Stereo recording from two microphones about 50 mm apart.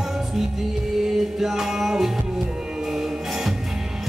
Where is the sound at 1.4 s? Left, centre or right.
Centre.